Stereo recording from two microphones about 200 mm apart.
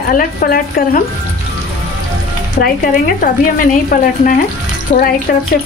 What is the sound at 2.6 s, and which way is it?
Speech, 45° left (ahead or behind).